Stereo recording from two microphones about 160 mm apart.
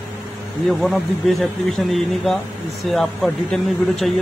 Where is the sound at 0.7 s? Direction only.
Centre (ahead or behind).